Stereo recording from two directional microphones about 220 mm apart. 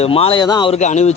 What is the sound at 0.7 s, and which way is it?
Speech, 30° left (ahead or behind).